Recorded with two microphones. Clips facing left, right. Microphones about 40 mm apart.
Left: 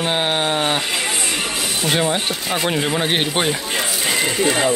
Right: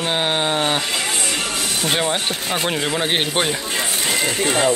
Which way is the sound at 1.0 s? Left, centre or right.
Centre.